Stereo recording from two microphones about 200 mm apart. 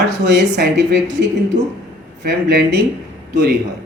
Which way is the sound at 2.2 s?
55° right (ahead or behind).